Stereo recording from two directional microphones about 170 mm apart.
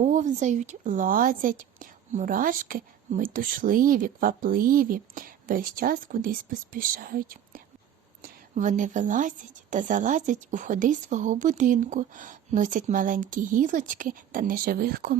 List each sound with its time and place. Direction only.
0.0 s a woman's voice: 45° right (ahead or behind)